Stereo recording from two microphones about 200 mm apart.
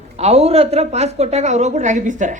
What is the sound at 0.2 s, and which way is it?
A woman's voice, 30° right (ahead or behind).